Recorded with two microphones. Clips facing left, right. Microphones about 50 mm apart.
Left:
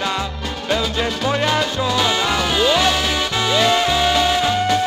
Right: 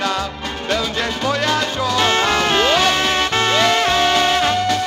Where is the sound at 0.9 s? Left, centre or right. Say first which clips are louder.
Even; centre.